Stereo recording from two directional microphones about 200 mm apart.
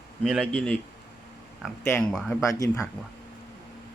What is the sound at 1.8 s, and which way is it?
Speech, 5° left (ahead or behind).